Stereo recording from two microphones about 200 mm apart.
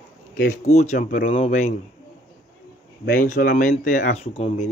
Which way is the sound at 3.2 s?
45° left (ahead or behind).